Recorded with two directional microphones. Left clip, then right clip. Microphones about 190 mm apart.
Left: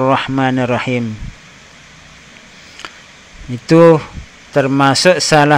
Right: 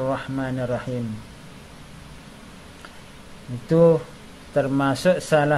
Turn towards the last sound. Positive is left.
turn(degrees=20)  # may be behind; listen again after turning